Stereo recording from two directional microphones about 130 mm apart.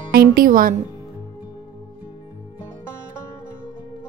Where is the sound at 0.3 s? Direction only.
90° right.